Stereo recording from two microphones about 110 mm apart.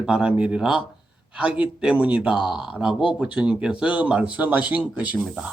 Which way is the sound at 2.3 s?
45° left (ahead or behind).